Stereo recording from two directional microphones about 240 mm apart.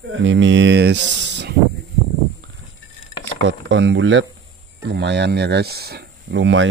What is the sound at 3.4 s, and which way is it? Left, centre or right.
Speech, right.